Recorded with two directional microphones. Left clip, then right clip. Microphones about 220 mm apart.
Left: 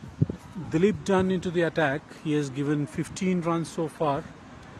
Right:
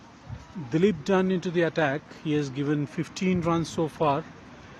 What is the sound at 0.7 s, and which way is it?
Speech, centre (ahead or behind).